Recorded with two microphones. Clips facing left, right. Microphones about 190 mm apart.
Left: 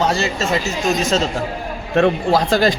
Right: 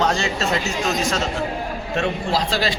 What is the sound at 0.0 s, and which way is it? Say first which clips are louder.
Speech: left 2 dB; 5° left (ahead or behind).